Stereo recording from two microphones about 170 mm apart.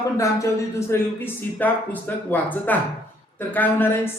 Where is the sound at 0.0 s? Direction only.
20° left (ahead or behind).